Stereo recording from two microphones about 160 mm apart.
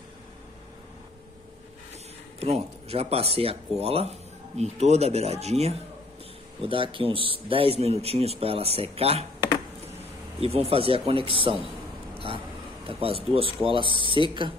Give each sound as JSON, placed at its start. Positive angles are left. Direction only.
{"t": 2.4, "sound": "speech", "side_deg": -40}
{"t": 10.4, "sound": "speech", "side_deg": -40}
{"t": 12.8, "sound": "speech", "side_deg": -35}